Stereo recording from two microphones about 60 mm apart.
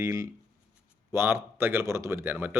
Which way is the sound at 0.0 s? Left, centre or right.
Right.